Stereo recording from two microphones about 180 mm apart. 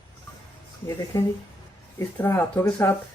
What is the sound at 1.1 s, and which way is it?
Speech, 15° left (ahead or behind).